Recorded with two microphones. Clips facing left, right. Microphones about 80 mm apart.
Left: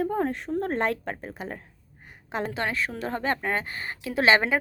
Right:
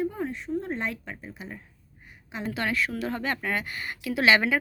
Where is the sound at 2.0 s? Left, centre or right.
Left.